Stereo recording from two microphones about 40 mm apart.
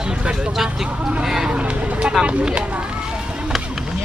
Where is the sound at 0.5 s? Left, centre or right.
Centre.